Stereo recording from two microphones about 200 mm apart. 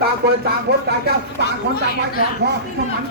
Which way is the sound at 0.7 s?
55° right (ahead or behind).